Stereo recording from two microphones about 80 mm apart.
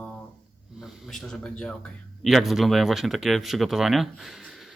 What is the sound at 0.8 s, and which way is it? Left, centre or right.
Speech, centre.